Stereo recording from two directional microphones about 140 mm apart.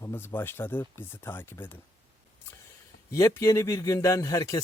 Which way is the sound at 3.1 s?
20° left (ahead or behind).